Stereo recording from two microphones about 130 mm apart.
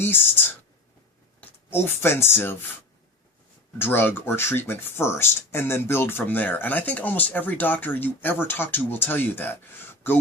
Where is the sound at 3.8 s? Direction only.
15° left (ahead or behind).